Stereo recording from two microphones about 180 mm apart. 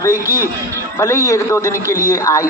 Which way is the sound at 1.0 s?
15° left (ahead or behind).